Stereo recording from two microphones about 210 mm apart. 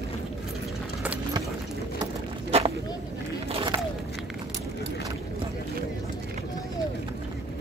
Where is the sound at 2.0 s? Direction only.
30° right (ahead or behind).